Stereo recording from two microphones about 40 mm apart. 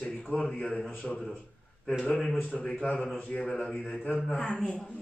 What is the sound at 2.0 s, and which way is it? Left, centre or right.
Speech, centre.